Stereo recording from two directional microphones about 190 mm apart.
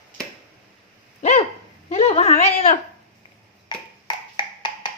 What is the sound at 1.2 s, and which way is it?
Dog, 35° left (ahead or behind).